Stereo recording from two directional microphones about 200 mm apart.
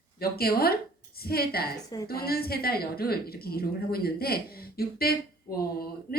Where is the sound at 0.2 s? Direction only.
50° left (ahead or behind).